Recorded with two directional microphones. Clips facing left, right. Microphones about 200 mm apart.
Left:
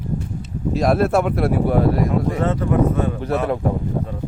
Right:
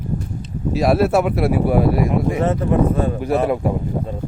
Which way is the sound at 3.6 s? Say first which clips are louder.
Right 1 dB; 10° right (ahead or behind).